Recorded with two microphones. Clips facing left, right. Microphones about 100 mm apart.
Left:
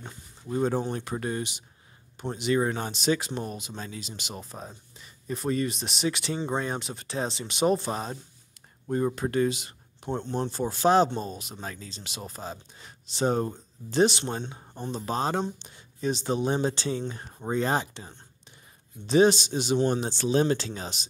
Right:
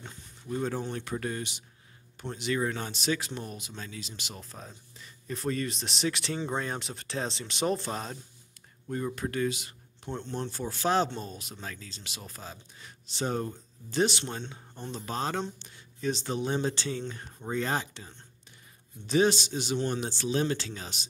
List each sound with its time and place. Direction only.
0.0 s a sound: 20° left (ahead or behind)
0.9 s speech: 25° left (ahead or behind)
8.8 s speech: 30° left (ahead or behind)
10.0 s speech: 45° left (ahead or behind)
10.5 s speech: 20° left (ahead or behind)